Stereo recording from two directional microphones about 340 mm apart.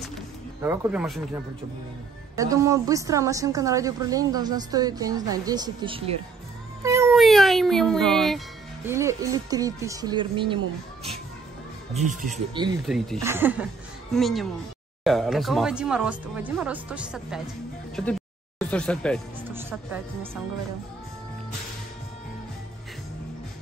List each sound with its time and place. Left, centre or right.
0.0 s music: centre
2.3 s a woman's voice: centre
6.8 s cat: centre
8.8 s a woman's voice: centre
11.9 s speech: right
12.8 s speech: centre
18.6 s speech: centre